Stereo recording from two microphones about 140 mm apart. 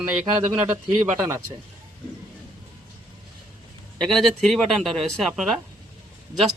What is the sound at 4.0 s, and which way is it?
Speech, centre (ahead or behind).